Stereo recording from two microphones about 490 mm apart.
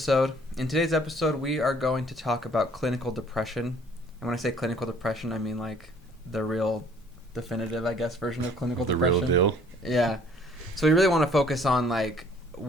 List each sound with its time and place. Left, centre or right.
0.0 s speech: centre
8.9 s speech: right
9.8 s speech: centre